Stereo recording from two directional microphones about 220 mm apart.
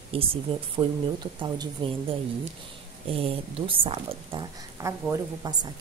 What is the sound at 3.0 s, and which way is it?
A woman's voice, 25° right (ahead or behind).